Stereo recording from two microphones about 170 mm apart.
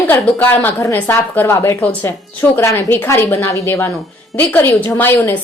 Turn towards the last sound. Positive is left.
turn(degrees=10)  # may be behind; listen again after turning